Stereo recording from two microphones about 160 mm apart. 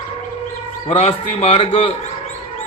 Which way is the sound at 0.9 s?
40° left (ahead or behind).